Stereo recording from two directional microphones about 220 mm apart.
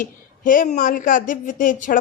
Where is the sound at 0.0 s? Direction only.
40° left (ahead or behind).